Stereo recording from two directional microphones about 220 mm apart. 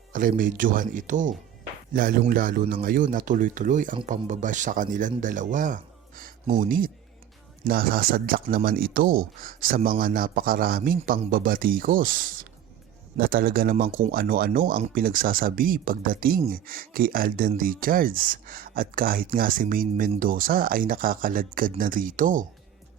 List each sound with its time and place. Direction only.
0.1 s speech: 40° right (ahead or behind)